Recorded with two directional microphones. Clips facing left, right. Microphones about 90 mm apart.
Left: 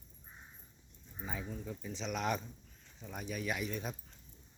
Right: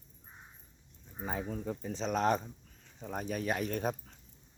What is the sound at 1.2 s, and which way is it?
Speech, 50° right (ahead or behind).